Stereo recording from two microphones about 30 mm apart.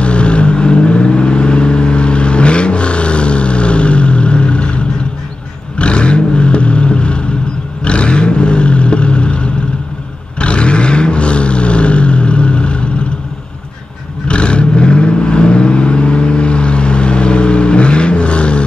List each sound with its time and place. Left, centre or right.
0.0 s vehicle: left
14.2 s vehicle: left